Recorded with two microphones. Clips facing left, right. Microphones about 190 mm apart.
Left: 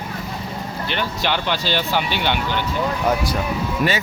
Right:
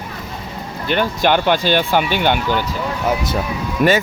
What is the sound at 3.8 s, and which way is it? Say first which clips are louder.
Speech: right 7 dB; 55° right (ahead or behind).